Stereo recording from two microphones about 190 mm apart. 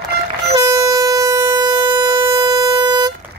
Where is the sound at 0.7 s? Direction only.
20° right (ahead or behind).